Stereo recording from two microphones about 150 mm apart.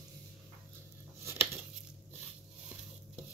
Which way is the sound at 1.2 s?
15° right (ahead or behind).